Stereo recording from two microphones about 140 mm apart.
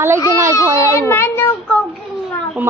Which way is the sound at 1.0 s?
15° left (ahead or behind).